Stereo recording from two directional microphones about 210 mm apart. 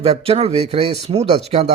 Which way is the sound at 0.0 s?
30° right (ahead or behind).